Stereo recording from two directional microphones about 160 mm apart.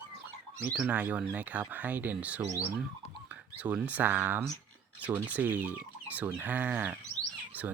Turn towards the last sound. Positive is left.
turn(degrees=-10)  # may be behind; listen again after turning